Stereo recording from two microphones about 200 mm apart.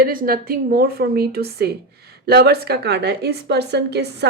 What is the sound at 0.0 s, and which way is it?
A woman's voice, 45° right (ahead or behind).